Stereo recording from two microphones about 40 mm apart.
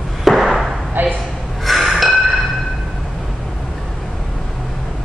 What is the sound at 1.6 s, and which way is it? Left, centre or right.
Chink, centre.